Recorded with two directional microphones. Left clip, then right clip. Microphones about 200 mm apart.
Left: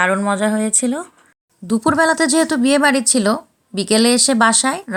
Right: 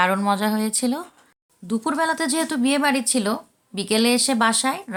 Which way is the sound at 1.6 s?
35° left (ahead or behind).